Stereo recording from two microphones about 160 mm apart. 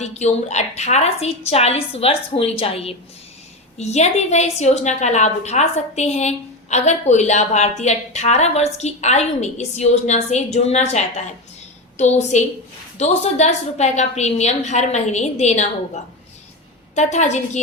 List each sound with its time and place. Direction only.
0.0 s a woman's voice: 45° left (ahead or behind)
16.9 s a woman's voice: 45° left (ahead or behind)